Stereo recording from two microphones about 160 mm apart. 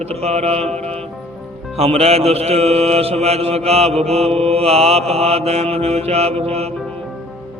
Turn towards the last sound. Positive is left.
turn(degrees=-40)  # may be behind; listen again after turning